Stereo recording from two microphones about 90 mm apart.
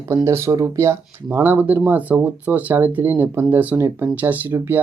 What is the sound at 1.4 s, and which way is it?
Speech, 20° right (ahead or behind).